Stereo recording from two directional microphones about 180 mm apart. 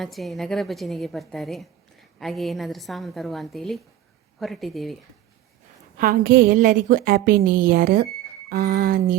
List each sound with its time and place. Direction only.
0.0 s a woman's voice: centre (ahead or behind)
6.0 s a woman's voice: 55° right (ahead or behind)